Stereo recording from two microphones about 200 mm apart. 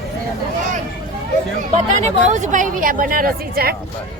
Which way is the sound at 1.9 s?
35° right (ahead or behind).